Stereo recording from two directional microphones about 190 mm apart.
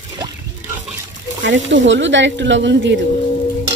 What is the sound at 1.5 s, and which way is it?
Speech, 75° right (ahead or behind).